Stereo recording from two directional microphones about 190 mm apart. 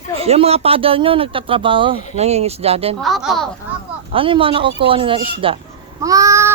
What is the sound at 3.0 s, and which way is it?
Speech, centre (ahead or behind).